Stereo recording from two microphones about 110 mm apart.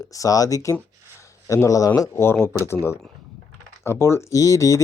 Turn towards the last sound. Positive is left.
turn(degrees=30)  # may be behind; listen again after turning